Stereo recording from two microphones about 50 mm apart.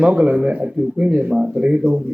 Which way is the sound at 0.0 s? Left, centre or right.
Right.